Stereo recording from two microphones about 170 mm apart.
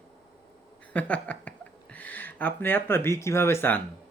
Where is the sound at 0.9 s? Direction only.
10° left (ahead or behind).